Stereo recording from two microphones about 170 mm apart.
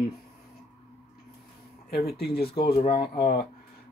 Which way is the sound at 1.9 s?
70° left (ahead or behind).